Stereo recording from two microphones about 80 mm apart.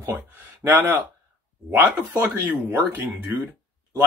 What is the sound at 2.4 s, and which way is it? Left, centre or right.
Speech, right.